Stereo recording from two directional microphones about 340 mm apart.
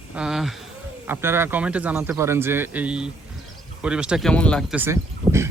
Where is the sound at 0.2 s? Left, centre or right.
Centre.